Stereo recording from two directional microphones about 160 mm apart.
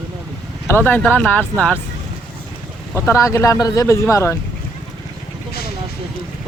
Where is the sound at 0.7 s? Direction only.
10° left (ahead or behind).